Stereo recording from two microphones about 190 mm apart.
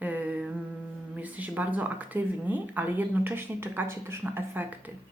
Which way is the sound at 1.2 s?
10° right (ahead or behind).